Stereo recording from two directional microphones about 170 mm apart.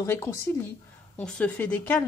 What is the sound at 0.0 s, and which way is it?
A woman's voice, 15° left (ahead or behind).